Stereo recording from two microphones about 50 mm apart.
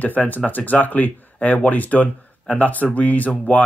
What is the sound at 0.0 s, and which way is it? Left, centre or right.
Speech, left.